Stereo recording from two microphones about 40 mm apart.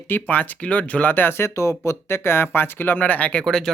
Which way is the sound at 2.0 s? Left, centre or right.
Left.